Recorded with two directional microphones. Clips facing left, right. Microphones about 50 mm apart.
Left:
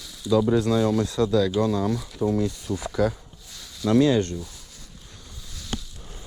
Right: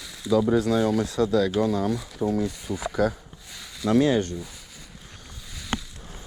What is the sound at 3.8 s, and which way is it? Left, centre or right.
Speech, right.